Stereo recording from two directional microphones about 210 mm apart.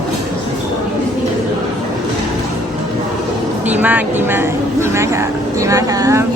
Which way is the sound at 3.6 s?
5° right (ahead or behind).